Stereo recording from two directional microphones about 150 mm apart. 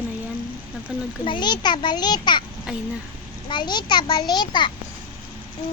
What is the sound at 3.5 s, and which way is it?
A child's voice, 30° left (ahead or behind).